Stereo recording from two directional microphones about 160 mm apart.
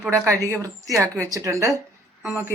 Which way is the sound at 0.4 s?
20° right (ahead or behind).